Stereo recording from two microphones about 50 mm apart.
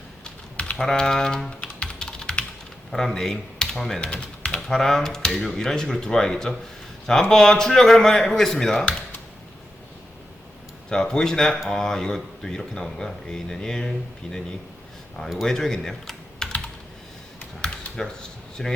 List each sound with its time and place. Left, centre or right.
0.3 s typing: left
0.8 s speech: centre
1.8 s typing: centre
2.9 s speech: centre
4.0 s typing: left
4.7 s speech: centre
10.8 s speech: centre
15.4 s speech: centre
17.6 s a sound: centre